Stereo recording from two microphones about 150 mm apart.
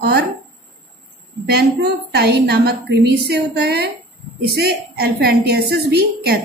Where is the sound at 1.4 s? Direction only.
90° right.